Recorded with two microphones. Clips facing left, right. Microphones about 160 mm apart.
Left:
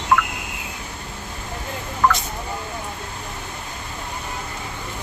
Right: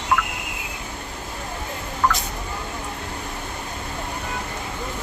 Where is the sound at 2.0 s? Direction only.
90° left.